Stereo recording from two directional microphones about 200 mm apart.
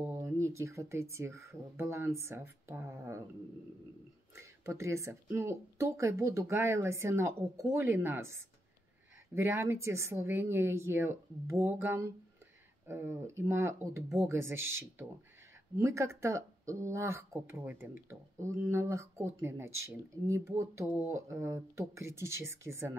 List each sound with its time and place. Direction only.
0.0 s speech: 15° right (ahead or behind)
4.4 s speech: 15° right (ahead or behind)